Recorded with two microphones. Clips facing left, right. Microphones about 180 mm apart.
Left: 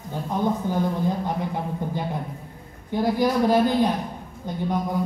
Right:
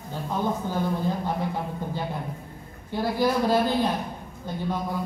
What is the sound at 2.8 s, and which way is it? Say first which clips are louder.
Speech: left 3 dB; 15° left (ahead or behind).